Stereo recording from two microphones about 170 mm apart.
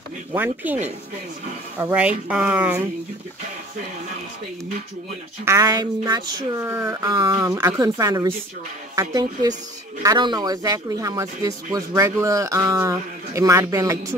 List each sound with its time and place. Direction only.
0.3 s speech: 10° right (ahead or behind)
1.8 s speech: 10° right (ahead or behind)
5.4 s speech: 20° right (ahead or behind)